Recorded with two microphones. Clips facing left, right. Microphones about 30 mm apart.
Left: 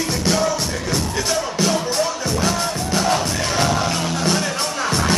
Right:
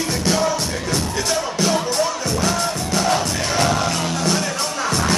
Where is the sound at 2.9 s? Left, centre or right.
Centre.